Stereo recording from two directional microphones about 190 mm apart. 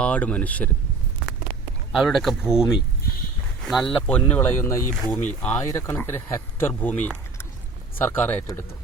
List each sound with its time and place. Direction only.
0.0 s speech: 5° left (ahead or behind)
1.9 s speech: centre (ahead or behind)